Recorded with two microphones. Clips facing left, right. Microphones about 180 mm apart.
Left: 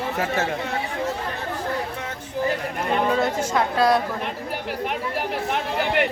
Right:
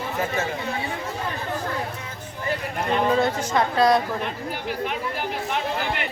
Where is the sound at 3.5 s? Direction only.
5° left (ahead or behind).